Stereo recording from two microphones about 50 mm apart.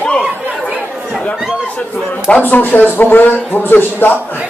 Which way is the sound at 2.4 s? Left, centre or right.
Left.